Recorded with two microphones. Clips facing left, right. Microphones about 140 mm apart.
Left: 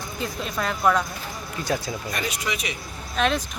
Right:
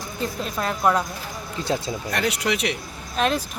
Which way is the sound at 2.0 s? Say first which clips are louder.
Right 7 dB; 75° right (ahead or behind).